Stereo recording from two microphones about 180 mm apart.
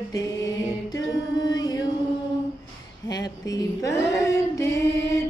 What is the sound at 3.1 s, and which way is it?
Female singing, 20° left (ahead or behind).